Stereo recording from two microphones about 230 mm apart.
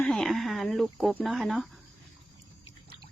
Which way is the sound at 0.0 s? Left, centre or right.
Centre.